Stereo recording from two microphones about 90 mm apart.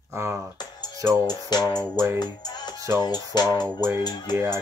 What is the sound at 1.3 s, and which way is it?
Music, 50° left (ahead or behind).